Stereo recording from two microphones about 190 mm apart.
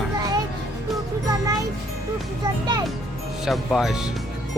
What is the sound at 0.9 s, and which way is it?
Speech, 20° right (ahead or behind).